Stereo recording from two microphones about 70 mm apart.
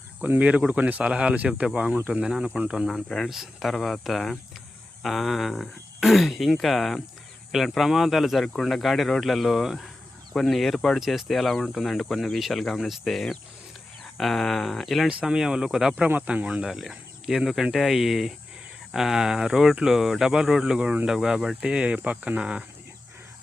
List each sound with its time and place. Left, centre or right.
0.2 s speech: right
2.9 s speech: centre
15.2 s speech: centre
16.0 s speech: centre
16.6 s speech: centre